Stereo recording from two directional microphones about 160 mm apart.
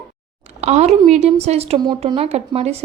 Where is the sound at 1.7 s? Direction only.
25° right (ahead or behind).